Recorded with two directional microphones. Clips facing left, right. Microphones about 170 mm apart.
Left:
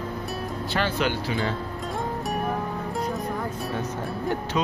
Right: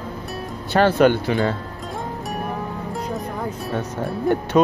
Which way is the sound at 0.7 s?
55° right (ahead or behind).